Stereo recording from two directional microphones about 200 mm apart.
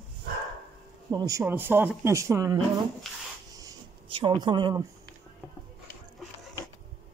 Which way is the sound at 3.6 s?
20° right (ahead or behind).